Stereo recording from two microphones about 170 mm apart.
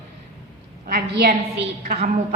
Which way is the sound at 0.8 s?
60° right (ahead or behind).